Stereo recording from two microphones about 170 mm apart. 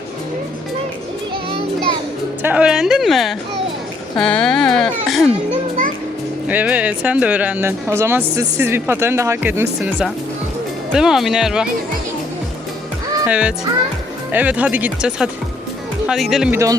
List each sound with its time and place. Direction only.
2.4 s speech: 10° right (ahead or behind)
5.5 s a child's voice: 50° right (ahead or behind)
6.5 s speech: 10° right (ahead or behind)
13.2 s speech: 5° right (ahead or behind)